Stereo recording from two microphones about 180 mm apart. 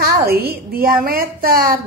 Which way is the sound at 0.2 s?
60° right (ahead or behind).